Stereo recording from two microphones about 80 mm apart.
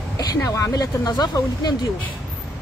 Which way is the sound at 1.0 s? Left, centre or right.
Left.